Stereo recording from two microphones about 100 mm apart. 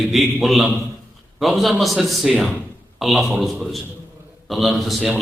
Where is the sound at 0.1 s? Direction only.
Centre (ahead or behind).